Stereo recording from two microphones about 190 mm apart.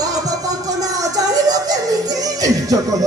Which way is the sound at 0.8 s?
20° right (ahead or behind).